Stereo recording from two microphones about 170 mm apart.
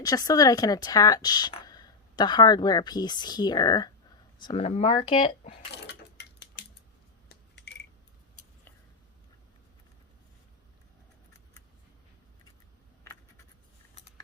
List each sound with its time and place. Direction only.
0.0 s speech: 20° left (ahead or behind)
4.6 s speech: 40° left (ahead or behind)
5.7 s a sound: 85° left